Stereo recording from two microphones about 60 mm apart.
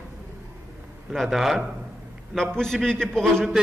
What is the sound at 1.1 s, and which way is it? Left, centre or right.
Speech, centre.